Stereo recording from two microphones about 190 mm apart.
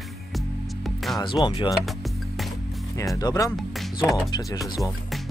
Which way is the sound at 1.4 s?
25° left (ahead or behind).